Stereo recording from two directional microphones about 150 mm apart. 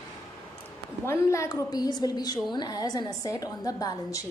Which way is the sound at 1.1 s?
20° left (ahead or behind).